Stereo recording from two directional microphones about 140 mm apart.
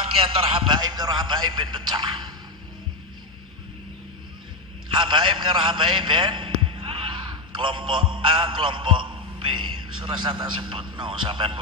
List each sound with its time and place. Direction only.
0.2 s a man's voice: 40° right (ahead or behind)
4.9 s a man's voice: 35° right (ahead or behind)